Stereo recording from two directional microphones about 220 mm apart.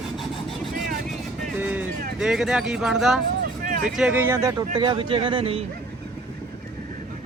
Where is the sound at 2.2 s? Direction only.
Centre (ahead or behind); by 5.6 s 25° right (ahead or behind).